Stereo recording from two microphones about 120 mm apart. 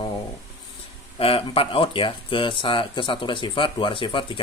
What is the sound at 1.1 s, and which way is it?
Speech, 50° left (ahead or behind).